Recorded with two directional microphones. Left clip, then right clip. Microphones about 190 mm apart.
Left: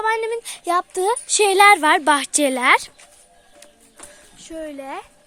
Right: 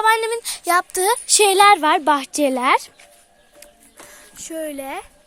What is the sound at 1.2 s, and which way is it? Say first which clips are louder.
Speech: even; centre (ahead or behind).